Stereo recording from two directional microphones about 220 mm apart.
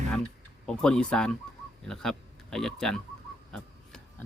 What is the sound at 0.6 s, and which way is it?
Speech, 5° left (ahead or behind).